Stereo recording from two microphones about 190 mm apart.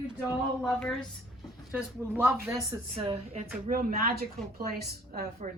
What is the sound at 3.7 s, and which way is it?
A woman's voice, 50° right (ahead or behind).